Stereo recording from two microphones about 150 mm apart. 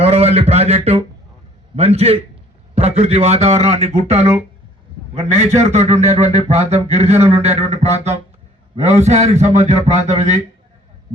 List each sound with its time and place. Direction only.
0.0 s a man's voice: 45° right (ahead or behind)